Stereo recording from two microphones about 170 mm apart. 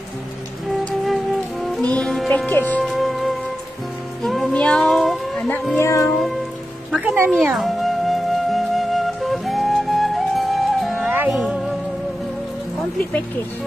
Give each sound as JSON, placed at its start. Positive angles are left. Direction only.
{"t": 1.0, "sound": "music", "side_deg": 0}
{"t": 1.9, "sound": "speech", "side_deg": 5}
{"t": 2.9, "sound": "music", "side_deg": 0}
{"t": 5.8, "sound": "speech", "side_deg": 15}
{"t": 7.0, "sound": "speech", "side_deg": -10}
{"t": 7.5, "sound": "music", "side_deg": 0}